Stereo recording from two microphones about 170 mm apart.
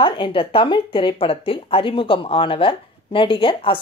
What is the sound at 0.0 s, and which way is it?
Speech, 30° left (ahead or behind).